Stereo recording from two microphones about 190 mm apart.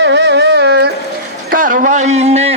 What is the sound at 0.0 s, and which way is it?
Carnatic music, 65° right (ahead or behind).